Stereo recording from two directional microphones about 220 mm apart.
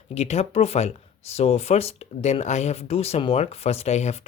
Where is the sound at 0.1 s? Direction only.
30° left (ahead or behind).